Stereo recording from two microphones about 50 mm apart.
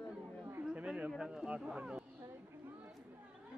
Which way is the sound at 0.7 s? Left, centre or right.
Right.